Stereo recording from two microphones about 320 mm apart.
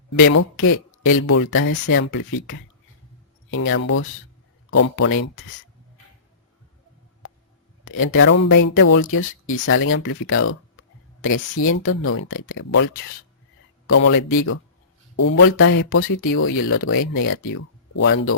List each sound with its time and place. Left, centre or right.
0.2 s speech: left
7.9 s speech: left